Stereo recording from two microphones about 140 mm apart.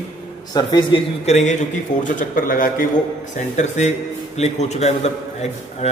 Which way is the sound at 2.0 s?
75° left (ahead or behind).